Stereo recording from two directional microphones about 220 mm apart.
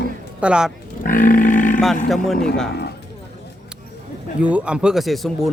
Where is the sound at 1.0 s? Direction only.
40° left (ahead or behind).